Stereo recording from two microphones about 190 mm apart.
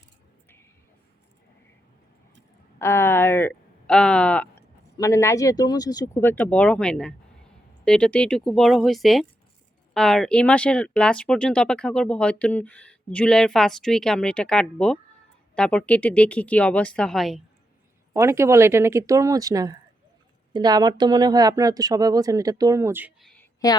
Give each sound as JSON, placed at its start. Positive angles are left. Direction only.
{"t": 2.7, "sound": "speech", "side_deg": 15}
{"t": 18.1, "sound": "speech", "side_deg": -15}
{"t": 23.2, "sound": "a sound", "side_deg": 5}